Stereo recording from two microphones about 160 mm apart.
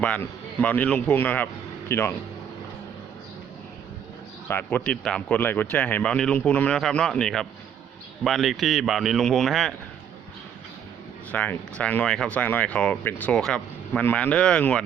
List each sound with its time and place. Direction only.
0.0 s speech: 10° left (ahead or behind)
4.4 s speech: 10° left (ahead or behind)
11.3 s speech: 10° left (ahead or behind)